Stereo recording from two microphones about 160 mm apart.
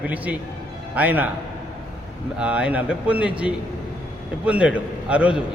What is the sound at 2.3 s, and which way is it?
A man's voice, 5° right (ahead or behind).